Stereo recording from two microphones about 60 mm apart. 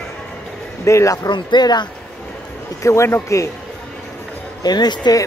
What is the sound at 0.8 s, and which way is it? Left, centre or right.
Speech, left.